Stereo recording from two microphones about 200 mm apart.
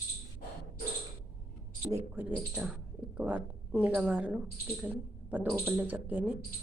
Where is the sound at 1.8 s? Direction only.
10° right (ahead or behind).